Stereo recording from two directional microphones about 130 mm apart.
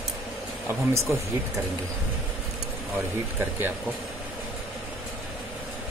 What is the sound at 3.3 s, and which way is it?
Speech, 15° right (ahead or behind).